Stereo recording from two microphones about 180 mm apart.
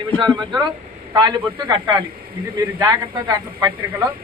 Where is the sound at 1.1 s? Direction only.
25° right (ahead or behind).